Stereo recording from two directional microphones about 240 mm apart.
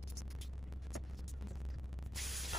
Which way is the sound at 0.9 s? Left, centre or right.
Centre.